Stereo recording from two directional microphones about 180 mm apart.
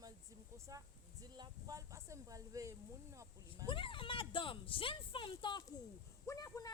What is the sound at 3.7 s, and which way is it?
Speech, 30° left (ahead or behind).